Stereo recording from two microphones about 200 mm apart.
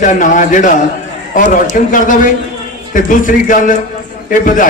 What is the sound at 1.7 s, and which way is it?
A man's voice, 40° left (ahead or behind).